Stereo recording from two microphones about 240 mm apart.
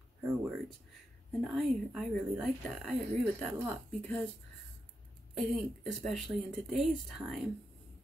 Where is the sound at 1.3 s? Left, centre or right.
Centre.